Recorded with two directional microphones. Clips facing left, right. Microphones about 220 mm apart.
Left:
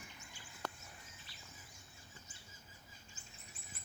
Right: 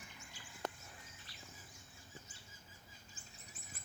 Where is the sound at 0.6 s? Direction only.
20° right (ahead or behind).